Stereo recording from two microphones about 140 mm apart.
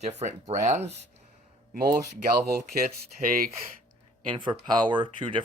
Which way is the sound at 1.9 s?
25° right (ahead or behind).